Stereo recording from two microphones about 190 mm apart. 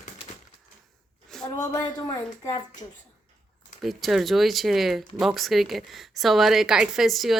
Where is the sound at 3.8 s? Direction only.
Centre (ahead or behind).